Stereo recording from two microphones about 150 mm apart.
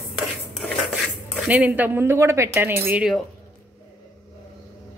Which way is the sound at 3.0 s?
Centre (ahead or behind).